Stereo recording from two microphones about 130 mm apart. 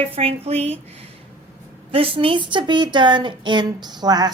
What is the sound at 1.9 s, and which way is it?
A woman's voice, 45° right (ahead or behind).